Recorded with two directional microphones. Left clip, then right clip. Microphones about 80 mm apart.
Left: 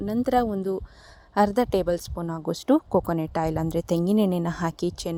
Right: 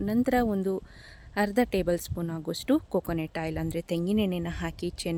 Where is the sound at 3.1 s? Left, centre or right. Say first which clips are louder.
Left 6 dB; left.